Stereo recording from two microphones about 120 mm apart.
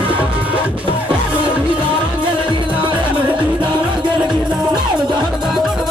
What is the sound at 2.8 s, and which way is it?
Music, 45° right (ahead or behind).